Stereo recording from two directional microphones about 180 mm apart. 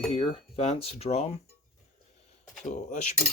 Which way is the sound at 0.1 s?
35° left (ahead or behind).